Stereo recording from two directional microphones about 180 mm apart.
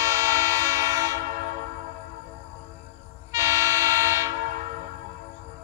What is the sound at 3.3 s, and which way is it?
Train, 15° right (ahead or behind).